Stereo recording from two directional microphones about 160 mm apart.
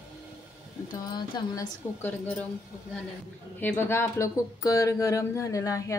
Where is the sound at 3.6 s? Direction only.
15° left (ahead or behind).